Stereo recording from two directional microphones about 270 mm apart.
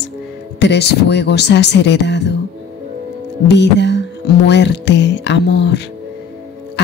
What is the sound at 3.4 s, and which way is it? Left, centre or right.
A woman's voice, left.